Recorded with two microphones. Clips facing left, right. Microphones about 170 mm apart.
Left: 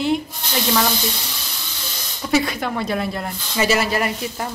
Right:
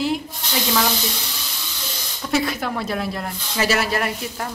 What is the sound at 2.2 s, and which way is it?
Speech, centre (ahead or behind).